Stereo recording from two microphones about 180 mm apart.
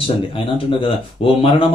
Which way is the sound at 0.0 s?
30° left (ahead or behind).